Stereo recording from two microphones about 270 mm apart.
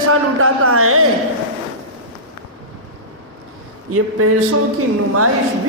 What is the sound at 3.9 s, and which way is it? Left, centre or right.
Speech, right.